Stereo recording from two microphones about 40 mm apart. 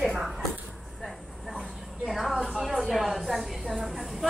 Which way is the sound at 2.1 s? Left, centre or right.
Centre.